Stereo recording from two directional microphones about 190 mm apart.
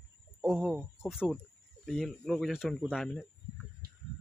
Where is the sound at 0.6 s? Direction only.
Centre (ahead or behind).